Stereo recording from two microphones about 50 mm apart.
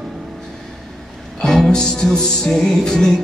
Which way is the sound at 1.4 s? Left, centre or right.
Centre.